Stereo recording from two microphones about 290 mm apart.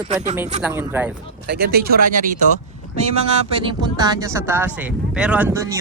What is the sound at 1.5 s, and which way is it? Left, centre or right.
Speech, right.